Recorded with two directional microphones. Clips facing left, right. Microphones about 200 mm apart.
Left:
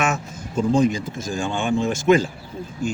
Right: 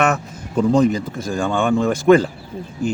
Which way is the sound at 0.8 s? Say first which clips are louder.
Right 3 dB; 60° right (ahead or behind).